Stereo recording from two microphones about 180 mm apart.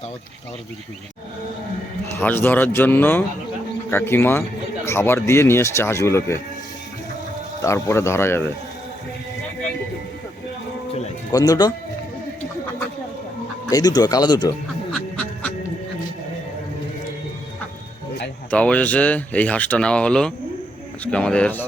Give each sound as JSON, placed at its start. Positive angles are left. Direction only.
{"t": 2.1, "sound": "speech", "side_deg": 10}
{"t": 7.6, "sound": "speech", "side_deg": 15}
{"t": 11.3, "sound": "speech", "side_deg": 20}
{"t": 13.7, "sound": "speech", "side_deg": 20}
{"t": 14.9, "sound": "duck", "side_deg": 5}
{"t": 18.5, "sound": "speech", "side_deg": 5}